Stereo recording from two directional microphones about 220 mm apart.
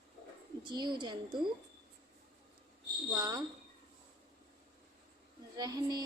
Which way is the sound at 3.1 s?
15° right (ahead or behind).